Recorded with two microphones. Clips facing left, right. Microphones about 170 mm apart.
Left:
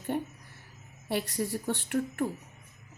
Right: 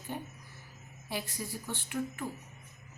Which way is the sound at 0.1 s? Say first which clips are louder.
Left 5 dB; 60° left (ahead or behind).